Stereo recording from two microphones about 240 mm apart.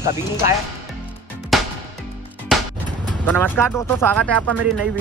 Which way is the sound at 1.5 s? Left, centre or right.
Centre.